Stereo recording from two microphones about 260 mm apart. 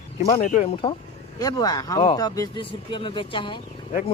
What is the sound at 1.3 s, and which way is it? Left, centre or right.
Speech, centre.